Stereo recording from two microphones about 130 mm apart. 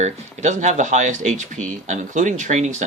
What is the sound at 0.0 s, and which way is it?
Speech, 65° right (ahead or behind).